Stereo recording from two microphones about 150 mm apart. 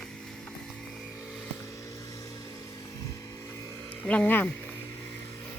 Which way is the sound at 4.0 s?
10° left (ahead or behind).